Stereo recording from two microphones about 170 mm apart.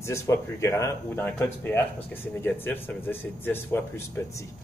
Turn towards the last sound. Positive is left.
turn(degrees=15)  # may be behind; listen again after turning